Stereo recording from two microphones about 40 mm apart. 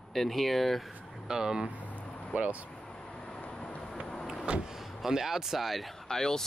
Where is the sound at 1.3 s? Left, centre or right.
Centre.